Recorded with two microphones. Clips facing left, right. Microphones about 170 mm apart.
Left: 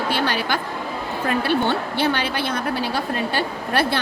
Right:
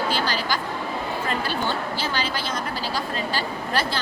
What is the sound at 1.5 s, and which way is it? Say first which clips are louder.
A woman's voice: left 5 dB; 60° left (ahead or behind).